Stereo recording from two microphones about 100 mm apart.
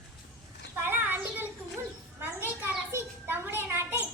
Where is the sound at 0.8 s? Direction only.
20° right (ahead or behind).